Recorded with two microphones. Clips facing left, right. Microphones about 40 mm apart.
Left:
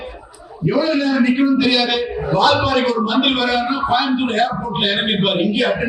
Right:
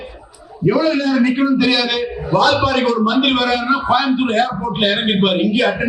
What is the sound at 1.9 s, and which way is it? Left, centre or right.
A man's voice, left.